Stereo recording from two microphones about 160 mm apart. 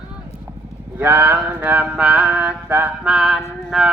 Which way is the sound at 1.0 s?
10° right (ahead or behind).